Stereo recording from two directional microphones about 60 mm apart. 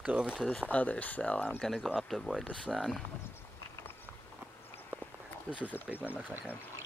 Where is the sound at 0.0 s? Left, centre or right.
Centre.